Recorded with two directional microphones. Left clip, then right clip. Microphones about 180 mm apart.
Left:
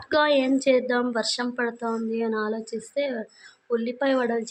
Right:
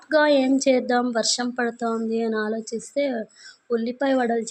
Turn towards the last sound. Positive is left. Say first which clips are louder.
# right 2 dB
turn(degrees=-15)  # may be behind; listen again after turning